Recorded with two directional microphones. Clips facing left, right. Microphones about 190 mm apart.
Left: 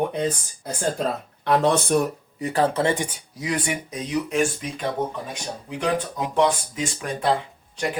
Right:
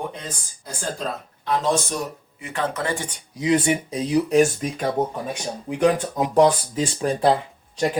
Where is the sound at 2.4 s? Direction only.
35° left (ahead or behind).